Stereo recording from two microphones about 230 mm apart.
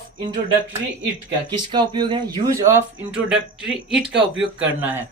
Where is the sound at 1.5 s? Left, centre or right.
Centre.